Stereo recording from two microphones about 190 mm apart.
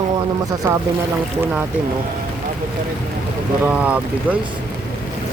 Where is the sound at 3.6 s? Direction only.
5° right (ahead or behind).